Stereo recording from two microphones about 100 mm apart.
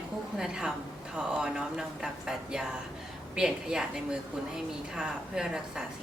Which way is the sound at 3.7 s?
10° right (ahead or behind).